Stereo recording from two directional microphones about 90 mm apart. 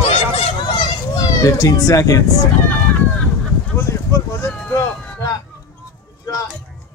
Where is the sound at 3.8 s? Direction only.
30° left (ahead or behind).